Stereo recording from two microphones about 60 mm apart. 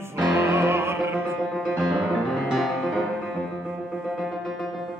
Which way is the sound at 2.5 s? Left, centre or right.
Centre.